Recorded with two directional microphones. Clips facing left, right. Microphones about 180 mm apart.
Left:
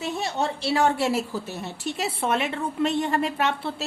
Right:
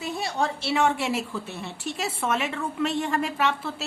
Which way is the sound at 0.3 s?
35° left (ahead or behind).